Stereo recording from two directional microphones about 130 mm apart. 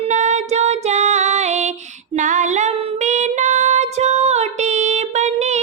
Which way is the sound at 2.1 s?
70° right (ahead or behind).